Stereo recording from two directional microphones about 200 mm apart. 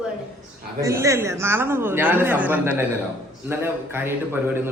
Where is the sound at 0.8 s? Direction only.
15° right (ahead or behind).